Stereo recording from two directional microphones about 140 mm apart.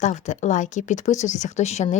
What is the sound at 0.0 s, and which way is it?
Speech, 60° left (ahead or behind).